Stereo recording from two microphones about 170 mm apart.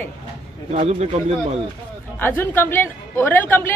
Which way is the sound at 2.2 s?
10° left (ahead or behind).